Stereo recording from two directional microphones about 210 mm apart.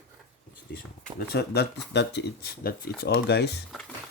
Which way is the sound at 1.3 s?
50° left (ahead or behind).